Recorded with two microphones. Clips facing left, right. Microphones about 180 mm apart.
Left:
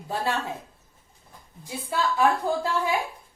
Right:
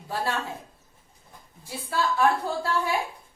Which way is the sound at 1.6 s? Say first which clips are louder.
Even; 20° left (ahead or behind).